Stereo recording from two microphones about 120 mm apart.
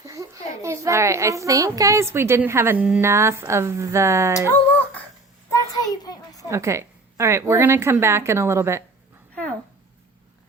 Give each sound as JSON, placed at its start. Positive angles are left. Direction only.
{"t": 0.0, "sound": "a child's voice", "side_deg": -25}
{"t": 5.5, "sound": "a sound", "side_deg": 30}
{"t": 6.5, "sound": "a child's voice", "side_deg": -25}
{"t": 9.3, "sound": "dog", "side_deg": 10}